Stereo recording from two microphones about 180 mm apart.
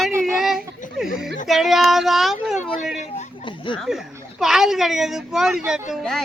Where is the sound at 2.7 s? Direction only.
40° left (ahead or behind).